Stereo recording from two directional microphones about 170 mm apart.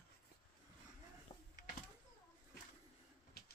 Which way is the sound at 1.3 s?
25° left (ahead or behind).